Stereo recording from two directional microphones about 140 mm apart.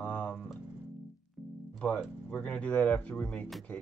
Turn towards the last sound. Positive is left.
turn(degrees=10)  # may be behind; listen again after turning